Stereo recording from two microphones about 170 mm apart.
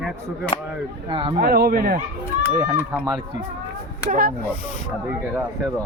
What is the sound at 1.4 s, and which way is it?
Speech, 70° right (ahead or behind).